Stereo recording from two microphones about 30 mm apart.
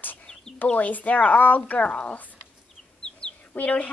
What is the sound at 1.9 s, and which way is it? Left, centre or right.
Speech, left.